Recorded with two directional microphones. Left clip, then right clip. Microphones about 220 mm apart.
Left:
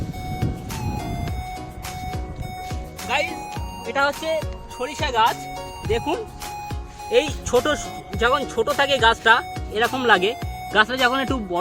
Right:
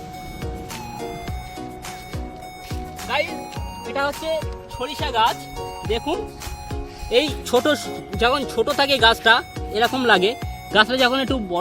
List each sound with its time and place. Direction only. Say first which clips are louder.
3.1 s music: even; centre (ahead or behind)
5.9 s music: left 1 dB; centre (ahead or behind)
7.1 s speech: even; 40° right (ahead or behind)